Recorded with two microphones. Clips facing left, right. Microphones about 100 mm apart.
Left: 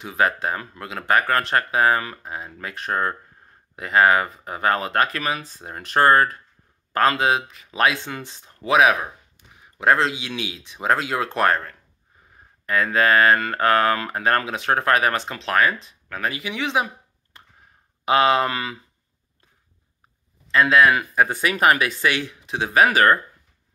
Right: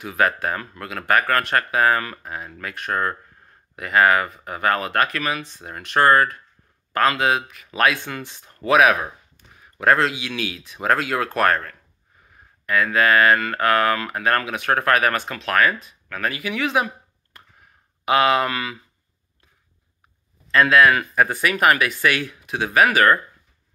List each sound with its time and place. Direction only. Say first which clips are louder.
0.0 s speech: right 1 dB; 25° left (ahead or behind)
8.5 s speech: right 1 dB; 20° left (ahead or behind)
20.5 s speech: right 1 dB; 20° left (ahead or behind)